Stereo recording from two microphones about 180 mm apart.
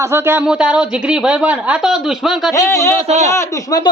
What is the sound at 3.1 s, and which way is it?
Speech, 40° right (ahead or behind).